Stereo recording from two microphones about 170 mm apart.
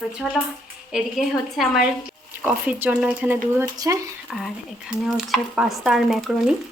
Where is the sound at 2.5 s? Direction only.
10° right (ahead or behind).